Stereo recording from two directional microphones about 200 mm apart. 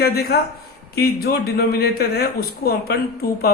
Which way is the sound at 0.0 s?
50° left (ahead or behind).